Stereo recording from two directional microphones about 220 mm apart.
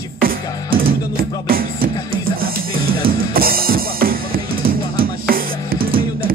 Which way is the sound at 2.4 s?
40° right (ahead or behind).